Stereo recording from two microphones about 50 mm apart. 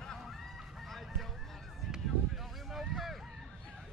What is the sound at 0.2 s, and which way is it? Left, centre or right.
Fowl, centre.